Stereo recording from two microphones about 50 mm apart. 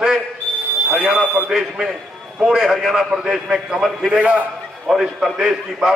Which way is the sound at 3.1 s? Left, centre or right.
Centre.